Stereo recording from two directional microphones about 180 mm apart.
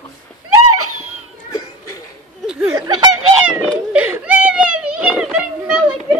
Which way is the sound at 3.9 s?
10° right (ahead or behind).